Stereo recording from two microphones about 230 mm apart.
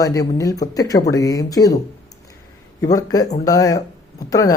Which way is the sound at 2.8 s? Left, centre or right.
Centre.